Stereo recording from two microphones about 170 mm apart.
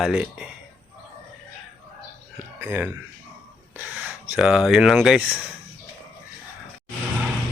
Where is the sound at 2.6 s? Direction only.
10° right (ahead or behind).